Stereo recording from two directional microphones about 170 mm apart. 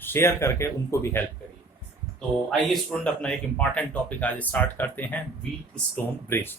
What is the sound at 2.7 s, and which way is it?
Speech, centre (ahead or behind).